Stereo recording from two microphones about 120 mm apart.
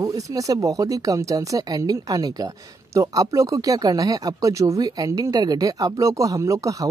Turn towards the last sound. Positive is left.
turn(degrees=-25)  # may be behind; listen again after turning